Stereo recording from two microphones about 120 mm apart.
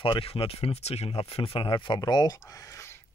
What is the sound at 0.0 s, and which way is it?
Speech, 50° left (ahead or behind).